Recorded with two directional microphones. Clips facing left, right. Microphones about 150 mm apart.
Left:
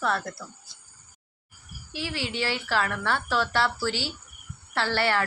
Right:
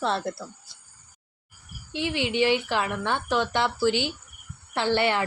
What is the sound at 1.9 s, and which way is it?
A woman's voice, 20° right (ahead or behind).